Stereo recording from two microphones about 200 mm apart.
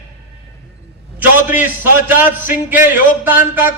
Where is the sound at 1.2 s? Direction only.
10° right (ahead or behind).